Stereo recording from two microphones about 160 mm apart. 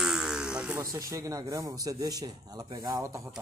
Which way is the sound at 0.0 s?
5° right (ahead or behind).